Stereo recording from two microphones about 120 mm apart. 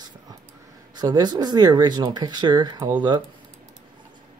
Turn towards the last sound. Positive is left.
turn(degrees=-40)  # may be behind; listen again after turning